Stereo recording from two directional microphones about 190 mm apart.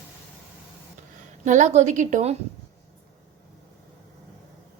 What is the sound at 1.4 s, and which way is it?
Speech, 40° right (ahead or behind).